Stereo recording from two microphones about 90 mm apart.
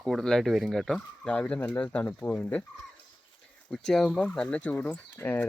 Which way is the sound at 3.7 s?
5° left (ahead or behind).